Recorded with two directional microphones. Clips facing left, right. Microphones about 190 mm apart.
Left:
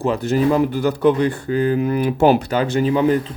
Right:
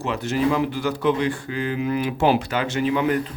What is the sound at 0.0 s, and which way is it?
Speech, 35° left (ahead or behind).